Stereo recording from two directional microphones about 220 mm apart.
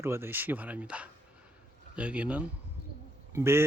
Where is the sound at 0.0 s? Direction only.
10° right (ahead or behind).